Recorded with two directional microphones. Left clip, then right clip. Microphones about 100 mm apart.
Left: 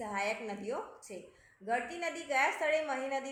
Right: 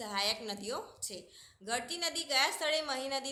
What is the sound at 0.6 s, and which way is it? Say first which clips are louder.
Speech: left 1 dB; 60° right (ahead or behind).